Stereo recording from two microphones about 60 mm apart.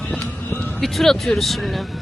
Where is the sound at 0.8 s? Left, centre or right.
Centre.